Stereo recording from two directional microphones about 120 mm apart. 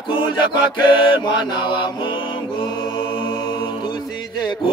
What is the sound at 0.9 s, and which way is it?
Mantra, 45° left (ahead or behind).